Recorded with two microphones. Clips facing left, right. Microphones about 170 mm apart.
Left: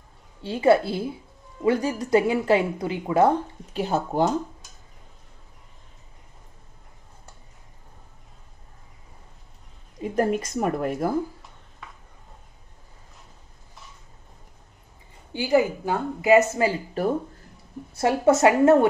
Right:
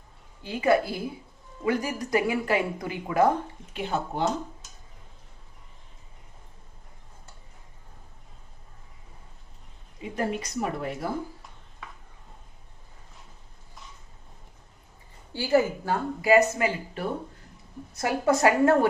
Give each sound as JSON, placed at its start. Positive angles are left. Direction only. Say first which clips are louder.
{"t": 0.4, "sound": "a woman's voice", "louder": "left 4 dB", "side_deg": 30}
{"t": 3.7, "sound": "speech", "louder": "left 5 dB", "side_deg": 40}
{"t": 10.0, "sound": "a woman's voice", "louder": "left 6 dB", "side_deg": 45}
{"t": 15.3, "sound": "a woman's voice", "louder": "left 2 dB", "side_deg": 15}
{"t": 17.9, "sound": "a woman's voice", "louder": "left 5 dB", "side_deg": 25}